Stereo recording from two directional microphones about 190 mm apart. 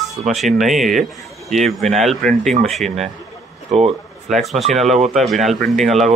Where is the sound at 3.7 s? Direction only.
35° right (ahead or behind).